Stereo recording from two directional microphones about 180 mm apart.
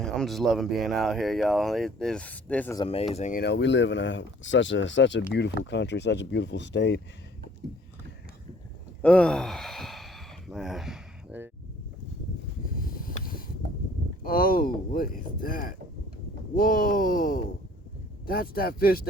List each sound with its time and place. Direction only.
0.0 s speech: centre (ahead or behind)
2.7 s speech: 30° left (ahead or behind)
3.3 s speech: 70° left (ahead or behind); by 5.2 s 85° left
5.3 s speech: 70° left (ahead or behind)
9.0 s gasp: 5° left (ahead or behind)
12.9 s a sound: 50° left (ahead or behind)
14.3 s speech: 55° left (ahead or behind)